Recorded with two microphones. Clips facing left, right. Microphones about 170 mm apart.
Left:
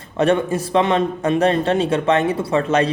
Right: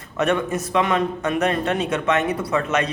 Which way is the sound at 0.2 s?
30° left (ahead or behind).